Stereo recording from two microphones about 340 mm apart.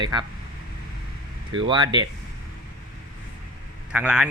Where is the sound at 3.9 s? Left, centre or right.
Centre.